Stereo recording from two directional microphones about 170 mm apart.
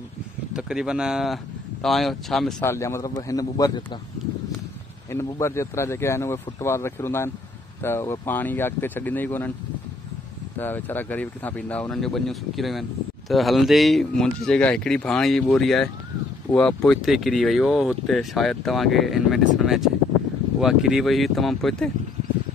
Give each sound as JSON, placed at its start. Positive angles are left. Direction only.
{"t": 0.5, "sound": "speech", "side_deg": -5}
{"t": 2.6, "sound": "a man's voice", "side_deg": 15}
{"t": 5.1, "sound": "speech", "side_deg": 15}
{"t": 10.6, "sound": "speech", "side_deg": 10}